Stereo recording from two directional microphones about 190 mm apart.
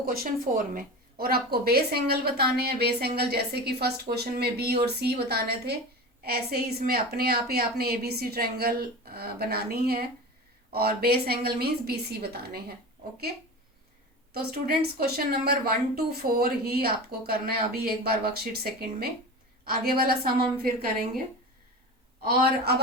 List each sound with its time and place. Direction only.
0.0 s a woman's voice: 50° right (ahead or behind)
14.3 s a woman's voice: 55° right (ahead or behind)
22.2 s a woman's voice: 55° right (ahead or behind)